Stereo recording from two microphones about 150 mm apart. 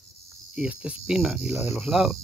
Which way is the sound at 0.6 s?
10° right (ahead or behind).